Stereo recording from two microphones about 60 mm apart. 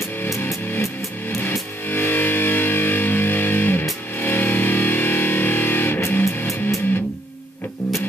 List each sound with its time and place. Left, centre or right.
1.9 s music: left
6.4 s music: left